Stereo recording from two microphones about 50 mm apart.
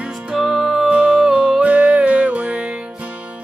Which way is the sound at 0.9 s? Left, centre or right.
Right.